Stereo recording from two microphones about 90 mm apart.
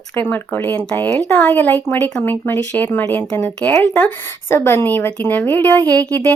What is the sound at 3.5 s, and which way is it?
Speech, 10° left (ahead or behind).